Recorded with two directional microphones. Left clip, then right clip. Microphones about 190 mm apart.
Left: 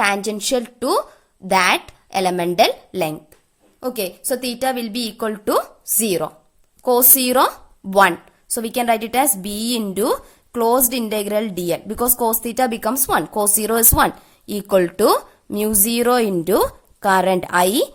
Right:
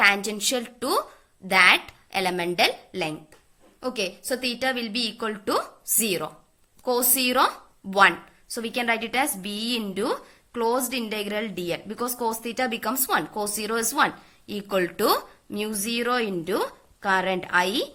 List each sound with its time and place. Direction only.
0.0 s a woman's voice: 45° left (ahead or behind)